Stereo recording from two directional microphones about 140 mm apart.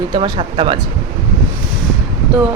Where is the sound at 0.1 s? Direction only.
35° right (ahead or behind).